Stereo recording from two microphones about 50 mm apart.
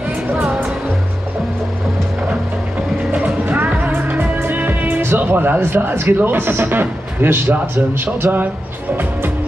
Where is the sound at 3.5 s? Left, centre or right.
Right.